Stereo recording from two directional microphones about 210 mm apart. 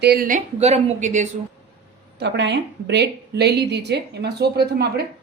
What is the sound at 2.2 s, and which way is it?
A woman's voice, 55° right (ahead or behind).